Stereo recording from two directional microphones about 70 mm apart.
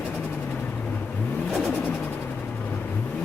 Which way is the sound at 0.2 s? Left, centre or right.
Left.